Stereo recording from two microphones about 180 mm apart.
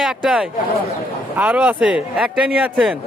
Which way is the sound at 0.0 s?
5° right (ahead or behind).